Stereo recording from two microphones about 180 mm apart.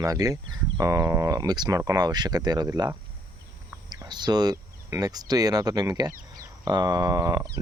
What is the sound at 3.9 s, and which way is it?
Speech, 25° right (ahead or behind).